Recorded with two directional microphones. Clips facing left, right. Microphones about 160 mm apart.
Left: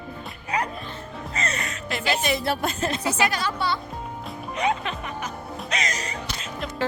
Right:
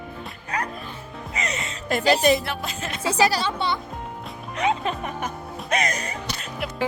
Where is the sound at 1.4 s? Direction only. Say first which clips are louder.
Even; 20° right (ahead or behind).